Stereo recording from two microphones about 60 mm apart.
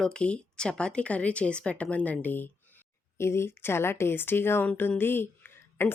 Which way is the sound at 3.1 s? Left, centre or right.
Left.